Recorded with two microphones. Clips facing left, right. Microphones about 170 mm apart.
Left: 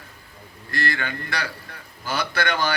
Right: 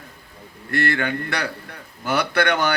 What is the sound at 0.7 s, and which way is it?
A man's voice, 60° right (ahead or behind).